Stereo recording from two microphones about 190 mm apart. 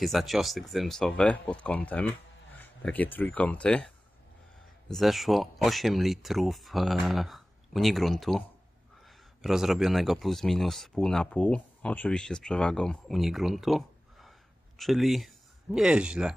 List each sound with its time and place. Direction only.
0.0 s speech: centre (ahead or behind)